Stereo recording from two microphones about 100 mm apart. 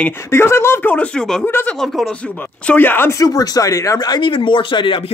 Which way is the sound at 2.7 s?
20° left (ahead or behind).